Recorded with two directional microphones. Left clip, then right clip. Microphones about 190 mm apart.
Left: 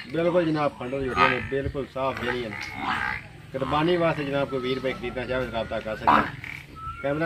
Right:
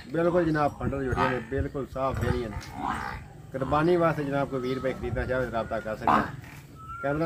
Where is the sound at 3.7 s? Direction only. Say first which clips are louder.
Even; centre (ahead or behind).